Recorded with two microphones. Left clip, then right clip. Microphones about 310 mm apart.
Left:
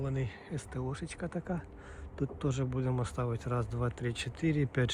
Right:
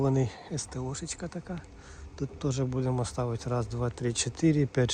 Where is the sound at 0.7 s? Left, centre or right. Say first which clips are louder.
Right 3 dB; centre.